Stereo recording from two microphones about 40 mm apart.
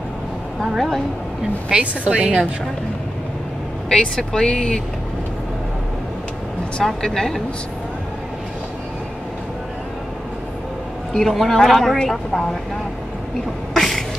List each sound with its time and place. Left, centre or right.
0.6 s a woman's voice: centre
1.7 s speech: centre
3.9 s speech: centre
6.8 s a woman's voice: centre
11.1 s speech: centre
13.7 s a sound: centre